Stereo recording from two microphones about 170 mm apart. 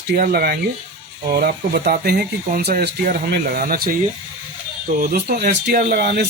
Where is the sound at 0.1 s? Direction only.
65° right (ahead or behind).